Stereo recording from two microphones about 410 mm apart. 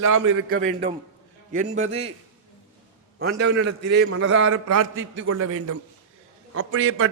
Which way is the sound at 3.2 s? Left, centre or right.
Right.